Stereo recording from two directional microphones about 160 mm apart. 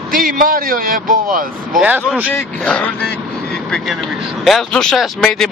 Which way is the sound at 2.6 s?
5° left (ahead or behind).